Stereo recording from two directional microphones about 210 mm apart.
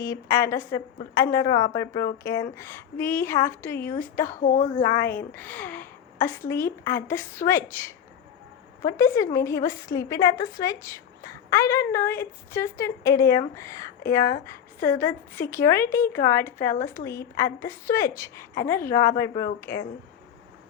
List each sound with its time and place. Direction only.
0.0 s a woman's voice: 15° left (ahead or behind)
4.4 s speech: 40° left (ahead or behind)
5.1 s a woman's voice: 10° left (ahead or behind)